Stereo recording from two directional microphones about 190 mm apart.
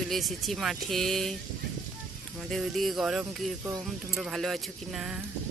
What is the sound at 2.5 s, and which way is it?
Speech, centre (ahead or behind).